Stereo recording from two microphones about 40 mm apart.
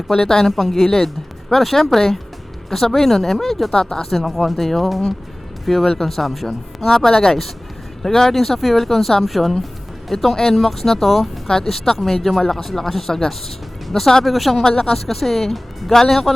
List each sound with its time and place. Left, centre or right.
0.2 s speech: centre
0.5 s speech: centre
3.7 s speech: centre
4.1 s speech: centre
14.6 s speech: centre